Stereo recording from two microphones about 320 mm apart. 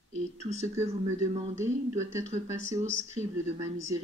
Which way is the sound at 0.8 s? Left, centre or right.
Right.